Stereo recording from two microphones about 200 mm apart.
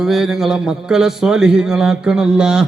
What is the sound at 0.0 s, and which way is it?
A man's voice, centre (ahead or behind).